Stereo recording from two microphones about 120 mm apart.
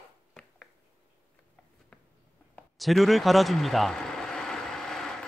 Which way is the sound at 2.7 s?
Centre (ahead or behind).